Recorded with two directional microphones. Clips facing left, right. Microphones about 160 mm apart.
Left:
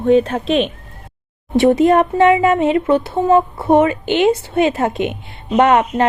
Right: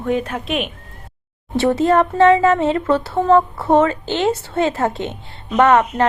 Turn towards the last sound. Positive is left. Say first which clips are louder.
# left 1 dB
turn(degrees=15)  # may be behind; listen again after turning